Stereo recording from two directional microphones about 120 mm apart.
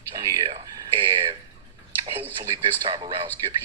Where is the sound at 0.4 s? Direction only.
50° right (ahead or behind).